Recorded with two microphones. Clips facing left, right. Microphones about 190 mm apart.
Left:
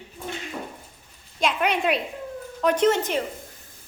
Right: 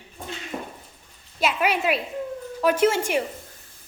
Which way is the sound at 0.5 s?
45° right (ahead or behind).